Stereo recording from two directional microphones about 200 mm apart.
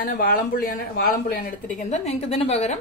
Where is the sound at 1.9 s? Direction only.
30° left (ahead or behind).